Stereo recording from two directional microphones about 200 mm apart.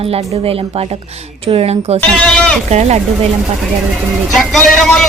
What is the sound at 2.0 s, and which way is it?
Speech, 5° left (ahead or behind).